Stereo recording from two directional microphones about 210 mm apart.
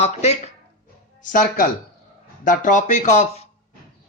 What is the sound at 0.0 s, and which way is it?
A man's voice, 30° left (ahead or behind).